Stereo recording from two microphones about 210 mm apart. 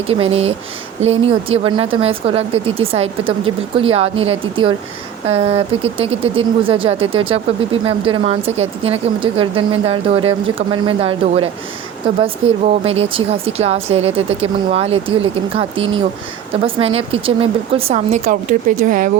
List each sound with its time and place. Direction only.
0.1 s speech: 30° right (ahead or behind)